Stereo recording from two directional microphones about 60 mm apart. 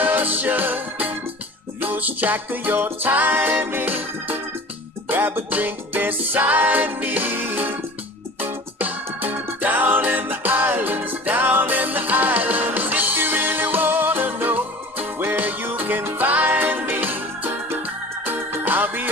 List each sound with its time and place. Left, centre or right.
0.0 s music: right